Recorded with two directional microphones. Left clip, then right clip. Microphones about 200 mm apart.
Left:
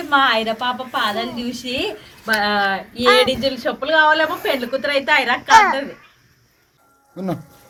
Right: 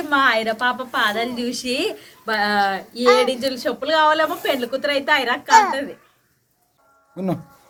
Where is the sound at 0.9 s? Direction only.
15° right (ahead or behind).